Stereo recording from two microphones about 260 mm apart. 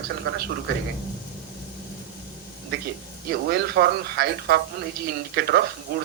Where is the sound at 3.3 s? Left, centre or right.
Right.